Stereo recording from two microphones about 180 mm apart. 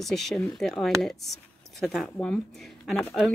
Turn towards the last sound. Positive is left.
turn(degrees=0)  # may be behind; listen again after turning